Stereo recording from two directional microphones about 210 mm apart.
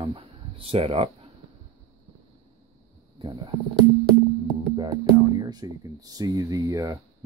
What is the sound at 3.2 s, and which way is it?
Speech, 25° right (ahead or behind).